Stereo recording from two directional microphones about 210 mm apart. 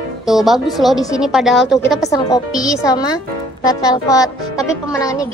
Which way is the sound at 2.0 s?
15° left (ahead or behind).